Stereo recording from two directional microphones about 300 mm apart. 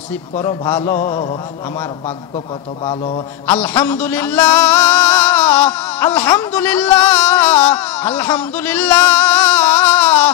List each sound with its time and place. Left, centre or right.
0.4 s a man's voice: centre
0.9 s a sound: centre
3.4 s music: centre